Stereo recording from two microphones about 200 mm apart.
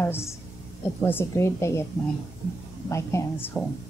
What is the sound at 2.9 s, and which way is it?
Speech, 15° left (ahead or behind).